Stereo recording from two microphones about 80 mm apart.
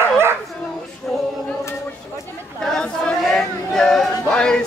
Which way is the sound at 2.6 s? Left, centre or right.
Centre.